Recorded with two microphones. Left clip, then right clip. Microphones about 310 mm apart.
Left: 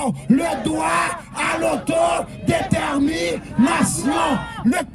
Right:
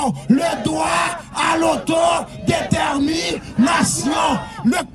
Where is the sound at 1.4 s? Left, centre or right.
Centre.